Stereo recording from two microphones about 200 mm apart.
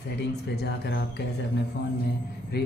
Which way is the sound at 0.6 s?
55° left (ahead or behind).